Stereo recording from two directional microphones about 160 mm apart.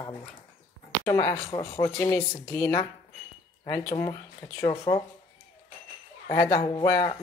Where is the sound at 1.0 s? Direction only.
15° left (ahead or behind).